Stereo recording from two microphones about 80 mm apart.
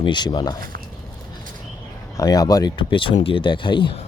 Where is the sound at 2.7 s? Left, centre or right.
Left.